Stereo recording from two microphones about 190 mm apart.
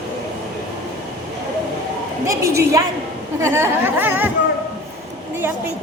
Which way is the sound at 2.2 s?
15° right (ahead or behind).